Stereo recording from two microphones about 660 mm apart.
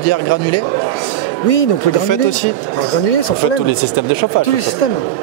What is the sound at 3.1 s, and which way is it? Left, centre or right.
Speech, left.